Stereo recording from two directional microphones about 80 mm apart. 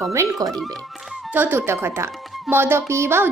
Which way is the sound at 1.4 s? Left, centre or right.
Right.